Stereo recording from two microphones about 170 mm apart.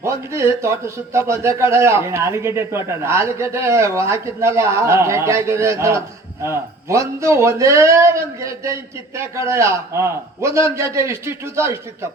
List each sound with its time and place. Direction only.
0.0 s a man's voice: 15° right (ahead or behind)